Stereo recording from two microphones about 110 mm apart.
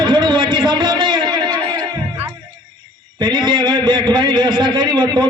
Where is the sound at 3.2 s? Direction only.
40° right (ahead or behind).